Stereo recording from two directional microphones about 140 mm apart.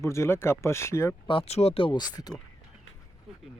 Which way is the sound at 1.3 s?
45° left (ahead or behind).